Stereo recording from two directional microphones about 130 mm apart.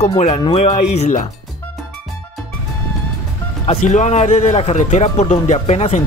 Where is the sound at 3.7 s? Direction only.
65° left (ahead or behind).